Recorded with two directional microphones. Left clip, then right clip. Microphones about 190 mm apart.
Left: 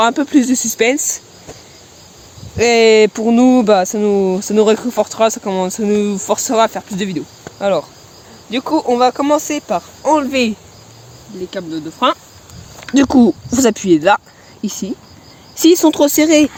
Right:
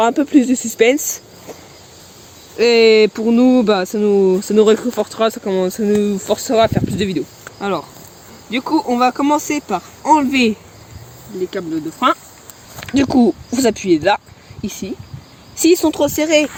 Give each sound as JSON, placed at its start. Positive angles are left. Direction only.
{"t": 0.0, "sound": "speech", "side_deg": 15}
{"t": 2.6, "sound": "speech", "side_deg": 40}
{"t": 7.6, "sound": "speech", "side_deg": 45}
{"t": 11.5, "sound": "speech", "side_deg": 10}
{"t": 12.9, "sound": "speech", "side_deg": 30}